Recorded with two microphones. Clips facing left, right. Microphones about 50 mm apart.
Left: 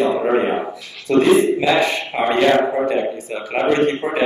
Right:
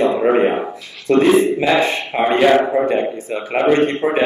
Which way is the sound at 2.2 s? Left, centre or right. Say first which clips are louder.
Right 2 dB; centre.